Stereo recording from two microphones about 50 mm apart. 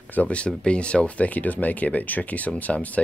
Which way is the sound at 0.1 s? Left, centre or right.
Left.